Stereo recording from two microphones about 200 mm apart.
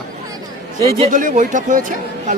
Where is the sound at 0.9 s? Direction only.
40° right (ahead or behind).